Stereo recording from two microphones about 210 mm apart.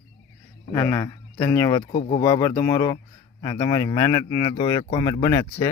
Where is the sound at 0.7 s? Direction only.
10° left (ahead or behind).